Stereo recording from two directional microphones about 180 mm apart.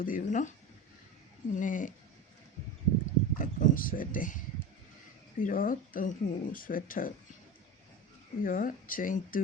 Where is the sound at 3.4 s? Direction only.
50° left (ahead or behind).